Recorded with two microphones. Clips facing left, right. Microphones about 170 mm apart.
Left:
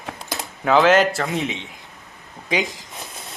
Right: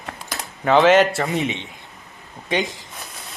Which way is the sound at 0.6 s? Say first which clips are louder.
Right 1 dB; centre (ahead or behind).